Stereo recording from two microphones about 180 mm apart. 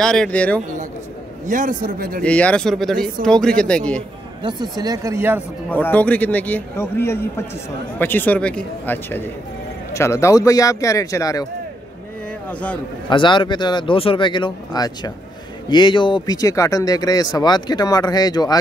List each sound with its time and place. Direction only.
0.0 s speech: 5° left (ahead or behind)
1.5 s a man's voice: 45° right (ahead or behind)
2.2 s speech: 5° left (ahead or behind)
4.4 s speech: 25° right (ahead or behind)
5.7 s a man's voice: 10° left (ahead or behind)
13.1 s speech: 25° left (ahead or behind)